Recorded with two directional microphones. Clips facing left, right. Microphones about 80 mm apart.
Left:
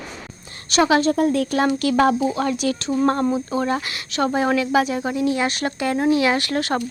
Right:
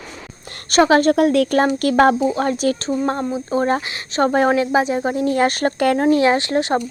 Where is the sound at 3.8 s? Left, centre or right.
Right.